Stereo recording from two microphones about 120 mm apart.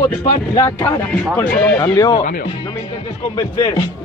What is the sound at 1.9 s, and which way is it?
Speech, 35° left (ahead or behind).